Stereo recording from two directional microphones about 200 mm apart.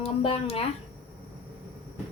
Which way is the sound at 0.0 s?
30° left (ahead or behind).